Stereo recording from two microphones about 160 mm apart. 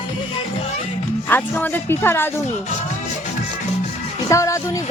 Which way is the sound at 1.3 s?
10° left (ahead or behind).